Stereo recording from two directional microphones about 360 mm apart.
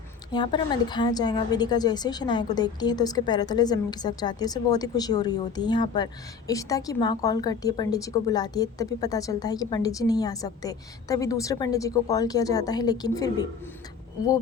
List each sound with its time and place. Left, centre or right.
0.3 s a woman's voice: centre